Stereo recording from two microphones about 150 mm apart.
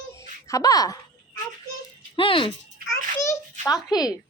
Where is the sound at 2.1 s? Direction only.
35° left (ahead or behind).